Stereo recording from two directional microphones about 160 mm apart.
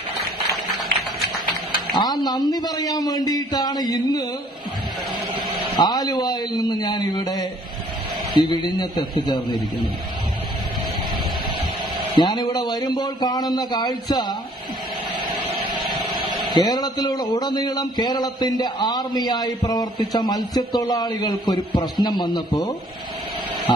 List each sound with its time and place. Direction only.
0.5 s a sound: centre (ahead or behind)
2.0 s speech: 25° left (ahead or behind)
5.8 s speech: 25° left (ahead or behind)
12.2 s speech: 25° left (ahead or behind)
15.7 s a sound: 30° right (ahead or behind)
16.5 s speech: 25° left (ahead or behind)